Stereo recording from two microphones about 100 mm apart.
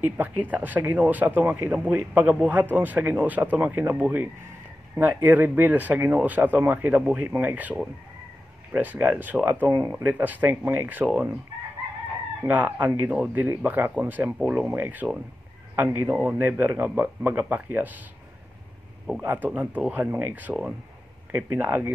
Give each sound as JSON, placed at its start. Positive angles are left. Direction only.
{"t": 0.0, "sound": "speech", "side_deg": -15}
{"t": 9.7, "sound": "speech", "side_deg": -35}
{"t": 10.0, "sound": "a man's voice", "side_deg": -15}
{"t": 12.4, "sound": "a man's voice", "side_deg": -15}
{"t": 19.2, "sound": "a man's voice", "side_deg": -20}